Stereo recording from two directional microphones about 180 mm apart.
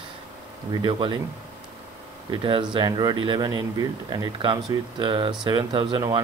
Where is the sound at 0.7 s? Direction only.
25° right (ahead or behind).